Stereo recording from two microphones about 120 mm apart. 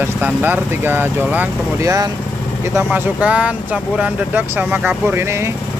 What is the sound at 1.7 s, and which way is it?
Speech, 30° right (ahead or behind).